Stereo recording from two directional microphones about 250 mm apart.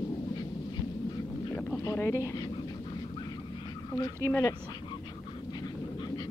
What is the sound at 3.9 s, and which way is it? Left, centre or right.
Speech, centre.